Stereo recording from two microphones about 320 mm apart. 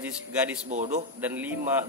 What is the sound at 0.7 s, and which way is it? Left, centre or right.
Speech, right.